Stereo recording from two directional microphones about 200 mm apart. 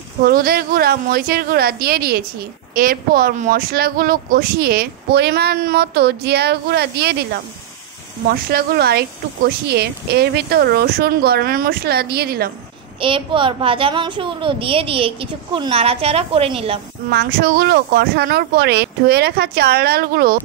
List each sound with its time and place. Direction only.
0.2 s speech: 50° right (ahead or behind)
13.0 s a child's voice: 25° right (ahead or behind)
17.1 s speech: 50° right (ahead or behind)